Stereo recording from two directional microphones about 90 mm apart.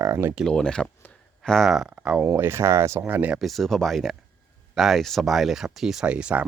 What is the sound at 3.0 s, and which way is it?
Speech, 20° right (ahead or behind).